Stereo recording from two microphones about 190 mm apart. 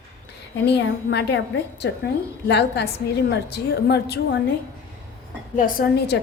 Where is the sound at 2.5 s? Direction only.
60° left (ahead or behind).